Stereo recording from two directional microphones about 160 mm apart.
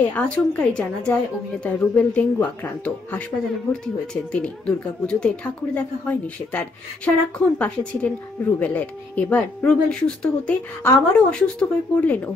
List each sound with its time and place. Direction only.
0.1 s a woman's voice: 10° left (ahead or behind)